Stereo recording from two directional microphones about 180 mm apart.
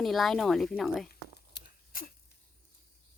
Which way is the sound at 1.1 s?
60° left (ahead or behind).